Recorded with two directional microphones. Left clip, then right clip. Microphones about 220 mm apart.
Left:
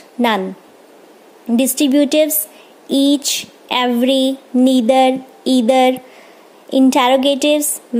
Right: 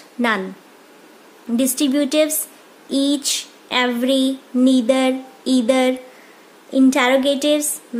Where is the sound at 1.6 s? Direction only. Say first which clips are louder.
Left 5 dB; 20° left (ahead or behind).